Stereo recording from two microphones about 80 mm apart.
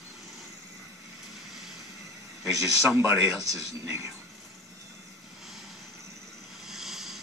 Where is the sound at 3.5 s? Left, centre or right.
Right.